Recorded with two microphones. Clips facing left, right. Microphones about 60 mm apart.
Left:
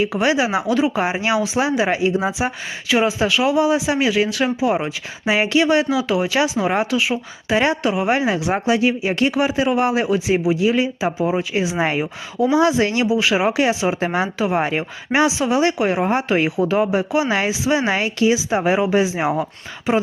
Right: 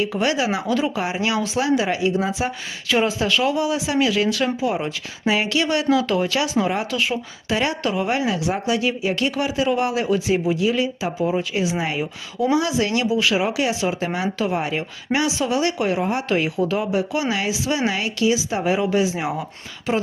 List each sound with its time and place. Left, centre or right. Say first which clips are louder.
0.1 s speech: left 3 dB; left
2.9 s speech: left 2 dB; centre
3.6 s speech: left 3 dB; left
5.9 s speech: even; centre
6.9 s speech: left 3 dB; centre
7.4 s speech: left 5 dB; left